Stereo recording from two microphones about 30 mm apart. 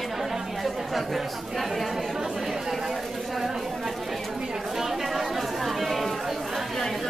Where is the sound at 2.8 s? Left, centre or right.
Centre.